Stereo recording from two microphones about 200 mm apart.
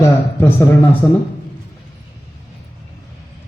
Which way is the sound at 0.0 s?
15° left (ahead or behind).